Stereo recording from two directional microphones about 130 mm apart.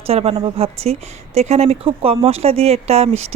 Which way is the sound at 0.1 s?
50° right (ahead or behind).